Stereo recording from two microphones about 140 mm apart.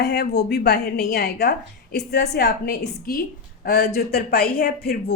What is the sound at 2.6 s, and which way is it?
A woman's voice, 90° left.